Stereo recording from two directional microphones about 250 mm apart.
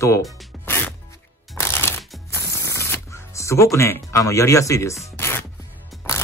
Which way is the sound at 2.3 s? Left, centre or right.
Centre.